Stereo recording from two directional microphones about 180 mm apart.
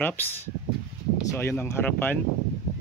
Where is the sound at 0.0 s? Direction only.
10° left (ahead or behind).